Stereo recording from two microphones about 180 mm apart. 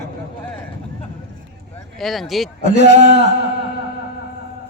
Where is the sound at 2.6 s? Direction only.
40° right (ahead or behind).